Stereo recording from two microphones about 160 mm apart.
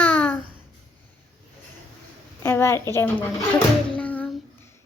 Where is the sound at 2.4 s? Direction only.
15° left (ahead or behind).